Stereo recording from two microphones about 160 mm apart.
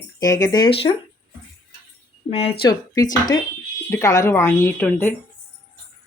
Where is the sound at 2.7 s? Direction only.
25° left (ahead or behind).